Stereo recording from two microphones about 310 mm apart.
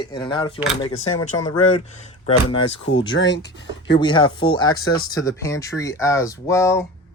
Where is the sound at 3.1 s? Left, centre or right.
Left.